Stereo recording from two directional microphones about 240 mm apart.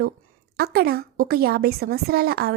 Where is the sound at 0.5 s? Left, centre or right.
Right.